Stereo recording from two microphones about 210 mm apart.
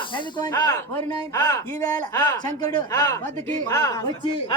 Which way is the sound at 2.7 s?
15° left (ahead or behind).